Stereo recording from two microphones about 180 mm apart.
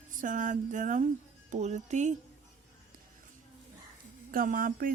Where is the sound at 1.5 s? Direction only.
40° right (ahead or behind).